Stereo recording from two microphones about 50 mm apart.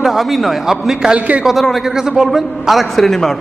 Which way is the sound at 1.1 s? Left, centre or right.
Right.